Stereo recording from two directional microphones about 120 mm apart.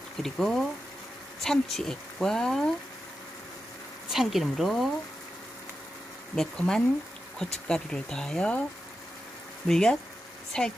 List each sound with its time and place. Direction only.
0.2 s speech: centre (ahead or behind)
4.1 s speech: centre (ahead or behind)
6.3 s speech: 5° left (ahead or behind)
9.7 s speech: 5° left (ahead or behind)